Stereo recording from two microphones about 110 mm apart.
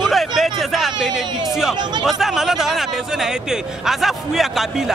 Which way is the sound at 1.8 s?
40° right (ahead or behind).